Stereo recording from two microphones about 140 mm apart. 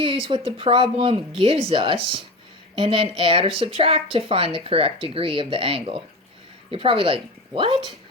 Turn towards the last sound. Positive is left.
turn(degrees=-35)  # may be behind; listen again after turning